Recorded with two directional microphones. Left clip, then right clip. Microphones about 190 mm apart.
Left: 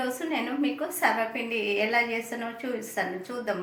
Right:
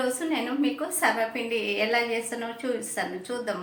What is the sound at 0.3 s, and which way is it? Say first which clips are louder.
A woman's voice: right 1 dB; 10° left (ahead or behind).